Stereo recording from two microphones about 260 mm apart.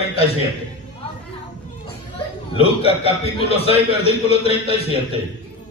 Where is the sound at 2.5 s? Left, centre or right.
Left.